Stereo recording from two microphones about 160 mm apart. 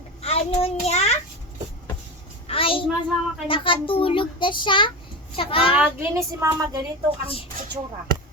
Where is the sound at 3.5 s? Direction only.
35° left (ahead or behind).